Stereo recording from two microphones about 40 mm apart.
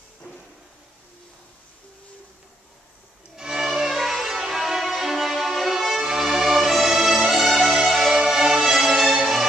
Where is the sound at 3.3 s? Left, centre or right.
Centre.